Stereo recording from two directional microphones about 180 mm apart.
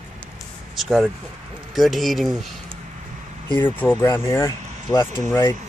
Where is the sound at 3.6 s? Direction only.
10° left (ahead or behind).